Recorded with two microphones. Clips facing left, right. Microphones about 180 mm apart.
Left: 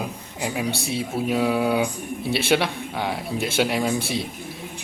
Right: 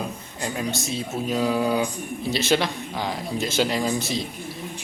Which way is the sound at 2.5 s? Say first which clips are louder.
Left 1 dB; 5° left (ahead or behind).